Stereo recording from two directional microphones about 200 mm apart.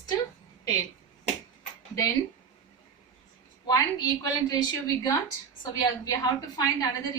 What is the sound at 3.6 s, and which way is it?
Speech, 20° left (ahead or behind).